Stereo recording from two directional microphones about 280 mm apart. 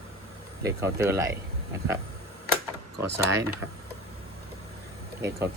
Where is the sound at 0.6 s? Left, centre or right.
Centre.